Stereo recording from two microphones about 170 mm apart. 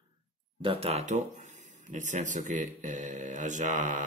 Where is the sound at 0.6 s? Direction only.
35° right (ahead or behind).